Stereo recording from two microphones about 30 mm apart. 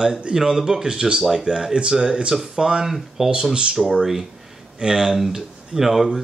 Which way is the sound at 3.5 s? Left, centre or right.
Right.